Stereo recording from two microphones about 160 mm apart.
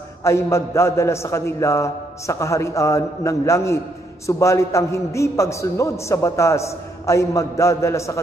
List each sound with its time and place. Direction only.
0.2 s a man's voice: 15° left (ahead or behind)